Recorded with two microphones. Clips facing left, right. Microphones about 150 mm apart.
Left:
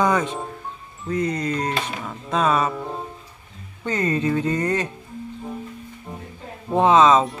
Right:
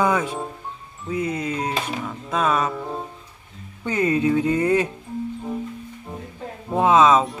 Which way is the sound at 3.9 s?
10° right (ahead or behind).